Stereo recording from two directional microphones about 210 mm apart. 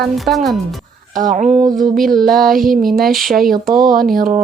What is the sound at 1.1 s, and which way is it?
Female singing, 40° right (ahead or behind).